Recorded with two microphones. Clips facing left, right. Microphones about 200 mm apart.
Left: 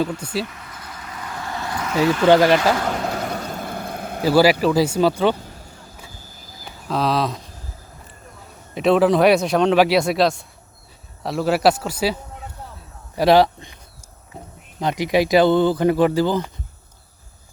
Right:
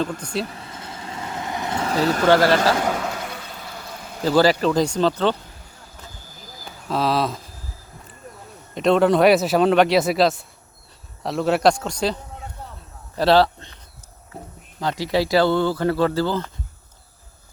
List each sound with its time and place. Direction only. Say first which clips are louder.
0.4 s vehicle: right 2 dB; 30° right (ahead or behind)
2.2 s speech: left 2 dB; 15° left (ahead or behind)
3.1 s a sound: left 6 dB; 45° left (ahead or behind)
4.2 s speech: left 2 dB; 10° left (ahead or behind)
6.8 s speech: left 1 dB; centre (ahead or behind)
8.7 s speech: left 1 dB; 5° left (ahead or behind)
14.8 s speech: left 3 dB; 20° left (ahead or behind)